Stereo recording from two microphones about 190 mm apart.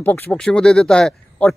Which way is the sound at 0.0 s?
10° left (ahead or behind).